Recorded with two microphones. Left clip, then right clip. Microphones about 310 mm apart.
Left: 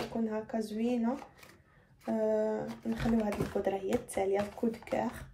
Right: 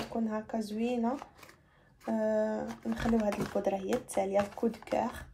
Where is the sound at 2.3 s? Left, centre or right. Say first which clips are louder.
Even; right.